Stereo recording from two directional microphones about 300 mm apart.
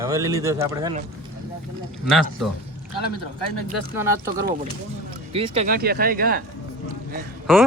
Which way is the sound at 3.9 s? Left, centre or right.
Centre.